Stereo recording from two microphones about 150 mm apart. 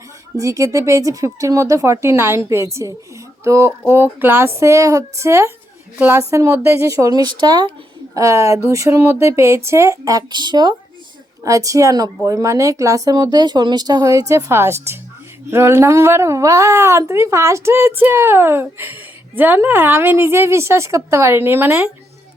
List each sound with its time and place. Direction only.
0.3 s a woman's voice: 20° right (ahead or behind)